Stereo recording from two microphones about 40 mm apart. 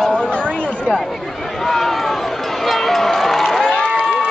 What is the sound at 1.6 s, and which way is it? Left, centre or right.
Run, centre.